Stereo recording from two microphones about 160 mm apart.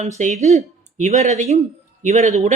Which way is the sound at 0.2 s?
50° right (ahead or behind).